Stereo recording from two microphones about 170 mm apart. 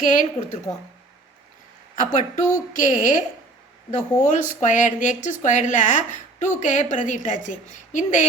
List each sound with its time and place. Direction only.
0.2 s a woman's voice: 40° left (ahead or behind)
2.0 s speech: 50° left (ahead or behind)